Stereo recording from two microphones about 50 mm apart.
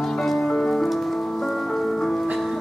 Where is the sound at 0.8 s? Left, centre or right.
Centre.